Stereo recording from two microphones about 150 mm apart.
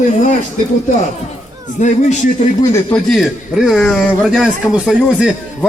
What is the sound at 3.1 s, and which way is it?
A man's voice, centre (ahead or behind).